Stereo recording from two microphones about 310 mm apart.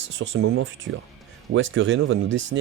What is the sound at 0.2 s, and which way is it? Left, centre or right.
Speech, right.